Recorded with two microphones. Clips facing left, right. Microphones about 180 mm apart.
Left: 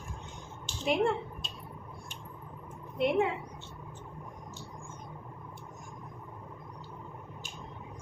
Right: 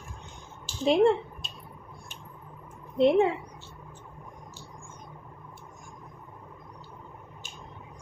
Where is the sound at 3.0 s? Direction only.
30° right (ahead or behind).